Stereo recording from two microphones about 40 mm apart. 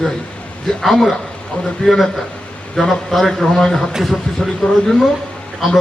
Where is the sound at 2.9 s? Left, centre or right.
Centre.